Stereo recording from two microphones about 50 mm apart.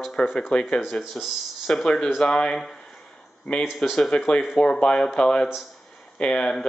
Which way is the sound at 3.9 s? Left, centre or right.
Centre.